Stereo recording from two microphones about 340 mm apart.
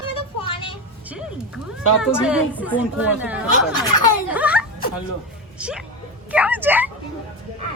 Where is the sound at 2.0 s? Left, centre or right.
Centre.